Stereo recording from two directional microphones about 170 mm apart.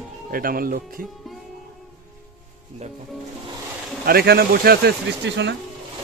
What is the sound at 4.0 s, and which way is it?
Speech, 65° right (ahead or behind).